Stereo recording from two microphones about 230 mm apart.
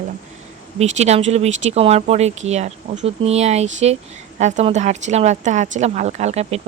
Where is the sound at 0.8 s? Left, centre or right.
Right.